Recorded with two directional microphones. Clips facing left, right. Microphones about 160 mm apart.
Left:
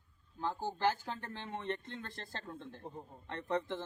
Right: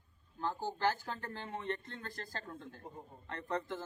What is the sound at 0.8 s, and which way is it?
Speech, 15° left (ahead or behind).